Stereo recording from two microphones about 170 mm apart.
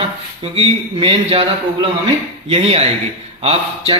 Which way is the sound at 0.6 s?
35° right (ahead or behind).